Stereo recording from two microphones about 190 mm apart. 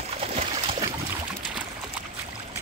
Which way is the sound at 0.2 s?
35° right (ahead or behind).